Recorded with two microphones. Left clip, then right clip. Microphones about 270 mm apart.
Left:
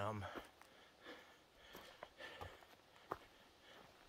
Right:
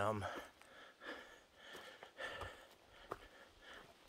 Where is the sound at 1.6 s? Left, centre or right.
Centre.